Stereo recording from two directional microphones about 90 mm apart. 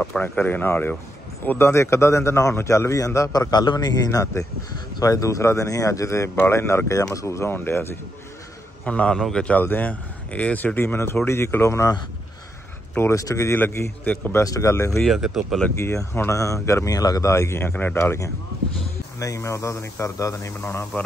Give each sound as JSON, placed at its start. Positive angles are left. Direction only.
{"t": 0.2, "sound": "a man's voice", "side_deg": 20}
{"t": 8.8, "sound": "a man's voice", "side_deg": 15}
{"t": 13.1, "sound": "a man's voice", "side_deg": 35}
{"t": 13.6, "sound": "a man's voice", "side_deg": 20}
{"t": 14.3, "sound": "a man's voice", "side_deg": 35}
{"t": 15.0, "sound": "speech", "side_deg": 0}
{"t": 15.8, "sound": "a man's voice", "side_deg": 30}
{"t": 17.9, "sound": "a man's voice", "side_deg": 30}